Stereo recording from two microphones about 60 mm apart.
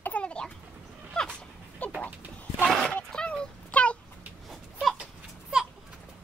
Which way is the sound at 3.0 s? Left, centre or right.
Centre.